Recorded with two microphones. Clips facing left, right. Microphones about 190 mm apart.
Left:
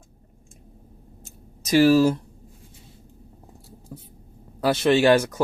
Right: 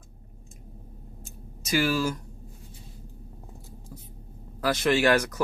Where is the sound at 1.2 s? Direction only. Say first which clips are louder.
Right 2 dB; 35° left (ahead or behind).